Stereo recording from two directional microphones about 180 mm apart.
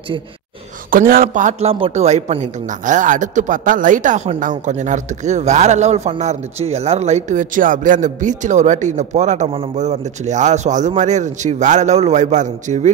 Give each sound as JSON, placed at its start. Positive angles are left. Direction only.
{"t": 0.8, "sound": "a man's voice", "side_deg": -50}